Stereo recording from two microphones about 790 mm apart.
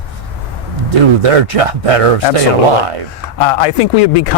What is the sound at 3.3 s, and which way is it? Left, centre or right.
A man's voice, left.